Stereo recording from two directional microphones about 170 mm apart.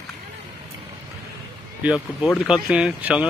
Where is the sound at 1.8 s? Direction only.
5° right (ahead or behind).